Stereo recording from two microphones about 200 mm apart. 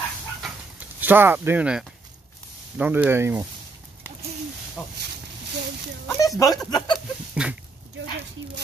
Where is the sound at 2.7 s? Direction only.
5° right (ahead or behind).